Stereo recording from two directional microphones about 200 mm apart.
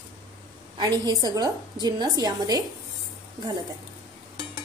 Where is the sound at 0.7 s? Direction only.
20° right (ahead or behind).